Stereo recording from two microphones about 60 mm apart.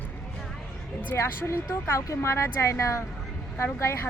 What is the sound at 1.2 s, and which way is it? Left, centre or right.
Speech, left.